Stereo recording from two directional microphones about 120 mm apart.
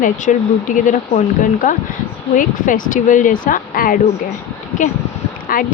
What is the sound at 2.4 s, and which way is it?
Speech, 90° left.